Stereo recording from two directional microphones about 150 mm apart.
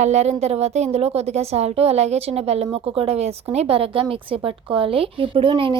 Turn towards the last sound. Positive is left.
turn(degrees=-35)  # may be behind; listen again after turning